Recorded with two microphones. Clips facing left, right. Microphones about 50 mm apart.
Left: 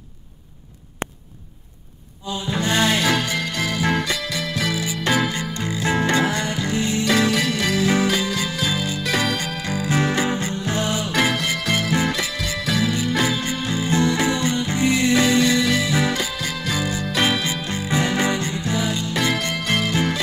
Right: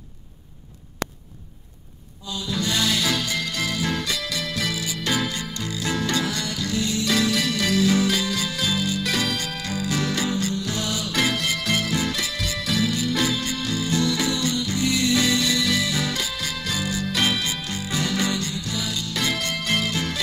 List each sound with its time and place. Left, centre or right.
2.2 s music: left
4.2 s music: centre